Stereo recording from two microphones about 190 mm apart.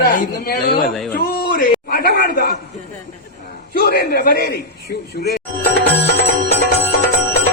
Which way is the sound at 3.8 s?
50° left (ahead or behind).